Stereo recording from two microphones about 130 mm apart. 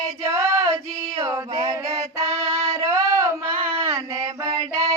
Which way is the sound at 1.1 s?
20° right (ahead or behind).